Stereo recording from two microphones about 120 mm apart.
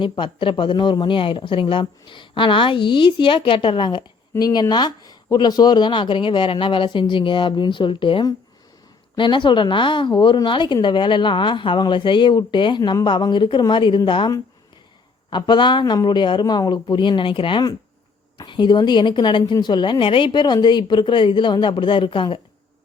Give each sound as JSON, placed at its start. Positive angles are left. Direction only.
{"t": 0.0, "sound": "a woman's voice", "side_deg": 45}